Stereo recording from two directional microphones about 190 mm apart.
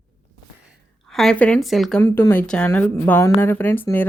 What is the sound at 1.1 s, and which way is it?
Speech, 5° left (ahead or behind).